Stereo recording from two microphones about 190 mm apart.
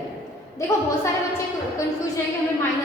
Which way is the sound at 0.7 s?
15° left (ahead or behind).